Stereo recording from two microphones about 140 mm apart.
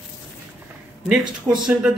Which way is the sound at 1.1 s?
5° right (ahead or behind).